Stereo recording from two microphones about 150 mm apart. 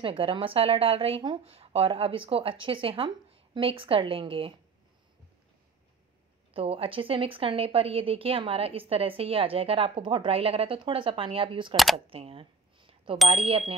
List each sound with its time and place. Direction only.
0.0 s speech: 35° right (ahead or behind)
6.5 s speech: 40° right (ahead or behind)
11.7 s speech: centre (ahead or behind)
12.1 s a sound: 40° right (ahead or behind)
13.3 s speech: 40° right (ahead or behind)